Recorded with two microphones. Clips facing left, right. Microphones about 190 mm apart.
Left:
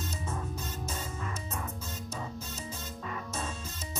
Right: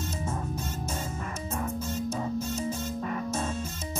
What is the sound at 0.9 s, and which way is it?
Music, 45° right (ahead or behind).